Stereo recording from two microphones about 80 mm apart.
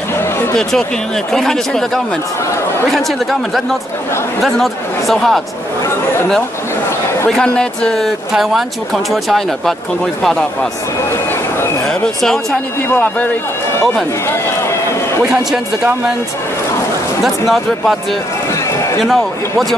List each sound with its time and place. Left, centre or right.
0.6 s speech: centre
2.9 s speech: centre
7.2 s speech: centre
8.3 s speech: centre
11.9 s speech: centre
12.8 s a man's voice: left
17.2 s speech: centre
19.0 s speech: centre